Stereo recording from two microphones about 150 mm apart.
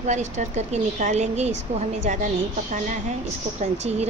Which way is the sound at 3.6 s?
45° right (ahead or behind).